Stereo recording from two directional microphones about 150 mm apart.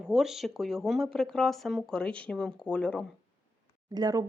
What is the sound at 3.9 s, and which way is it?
Speech, 25° right (ahead or behind).